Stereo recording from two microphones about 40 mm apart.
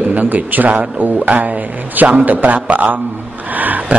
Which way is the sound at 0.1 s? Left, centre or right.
Right.